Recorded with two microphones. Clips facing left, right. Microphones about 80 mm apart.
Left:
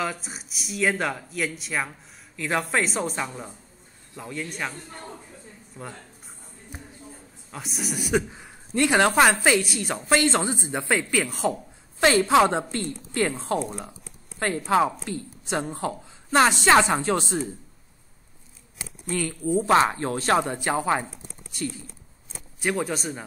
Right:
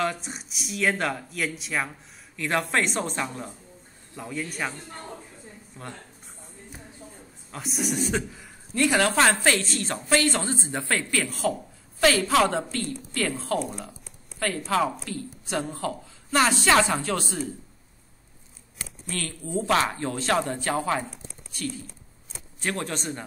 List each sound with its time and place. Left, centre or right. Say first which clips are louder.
0.0 s speech: right 2 dB; centre
5.8 s speech: left 2 dB; centre
7.5 s speech: right 3 dB; centre
8.3 s speech: left 4 dB; left
10.0 s speech: left 2 dB; left
19.0 s speech: left 8 dB; centre; by 20.3 s left
20.3 s speech: left 2 dB; centre
22.6 s speech: left 4 dB; centre